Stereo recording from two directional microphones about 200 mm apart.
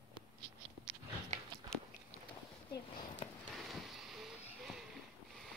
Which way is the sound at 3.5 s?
Centre (ahead or behind).